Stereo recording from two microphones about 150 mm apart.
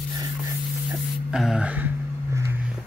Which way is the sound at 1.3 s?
Centre (ahead or behind).